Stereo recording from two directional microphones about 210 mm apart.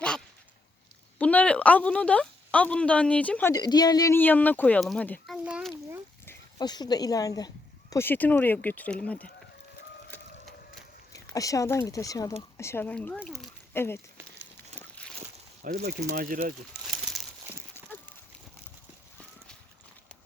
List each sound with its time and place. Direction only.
1.2 s speech: 5° left (ahead or behind)
3.5 s speech: 20° left (ahead or behind); by 6.0 s 5° right (ahead or behind)
6.2 s speech: 20° left (ahead or behind)
10.1 s sewing machine: 10° left (ahead or behind)
11.3 s speech: 15° left (ahead or behind); by 13.5 s centre (ahead or behind)
13.7 s speech: 10° left (ahead or behind)
14.8 s walk: 5° left (ahead or behind)
15.6 s speech: 45° right (ahead or behind)
16.8 s crumpling: centre (ahead or behind)